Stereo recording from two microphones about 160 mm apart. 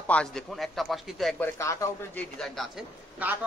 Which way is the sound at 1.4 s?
20° left (ahead or behind).